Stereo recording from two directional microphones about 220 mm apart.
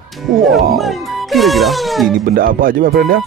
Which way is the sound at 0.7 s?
Centre (ahead or behind).